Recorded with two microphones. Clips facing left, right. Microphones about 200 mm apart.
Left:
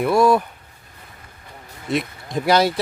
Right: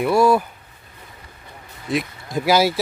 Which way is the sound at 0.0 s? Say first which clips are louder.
Even; centre (ahead or behind).